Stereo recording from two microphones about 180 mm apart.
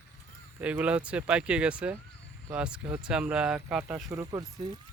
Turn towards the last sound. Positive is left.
turn(degrees=-20)  # may be behind; listen again after turning